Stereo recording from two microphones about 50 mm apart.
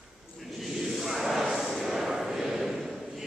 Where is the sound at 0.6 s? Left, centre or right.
Centre.